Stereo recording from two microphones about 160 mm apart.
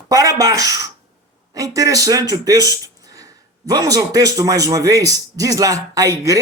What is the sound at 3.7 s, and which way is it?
Speech, 20° right (ahead or behind).